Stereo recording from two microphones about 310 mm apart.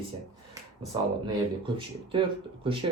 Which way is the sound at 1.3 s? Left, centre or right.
Centre.